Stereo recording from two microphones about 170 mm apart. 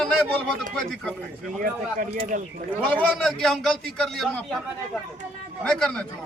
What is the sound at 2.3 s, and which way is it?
Speech, 55° right (ahead or behind).